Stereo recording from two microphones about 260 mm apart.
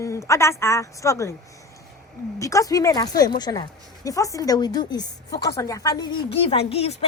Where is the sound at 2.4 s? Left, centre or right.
Centre.